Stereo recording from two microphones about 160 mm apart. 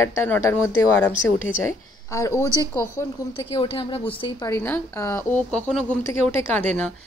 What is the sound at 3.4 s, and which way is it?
Speech, 35° left (ahead or behind).